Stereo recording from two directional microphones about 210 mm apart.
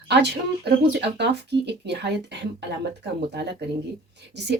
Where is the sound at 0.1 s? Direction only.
50° right (ahead or behind).